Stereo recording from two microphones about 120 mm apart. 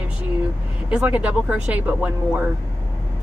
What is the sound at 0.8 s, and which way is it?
A woman's voice, 10° right (ahead or behind).